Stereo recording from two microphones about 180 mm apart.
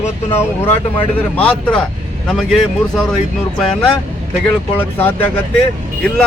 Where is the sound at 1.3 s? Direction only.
10° left (ahead or behind).